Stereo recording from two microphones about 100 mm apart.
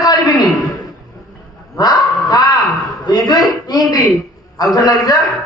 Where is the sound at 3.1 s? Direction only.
40° left (ahead or behind).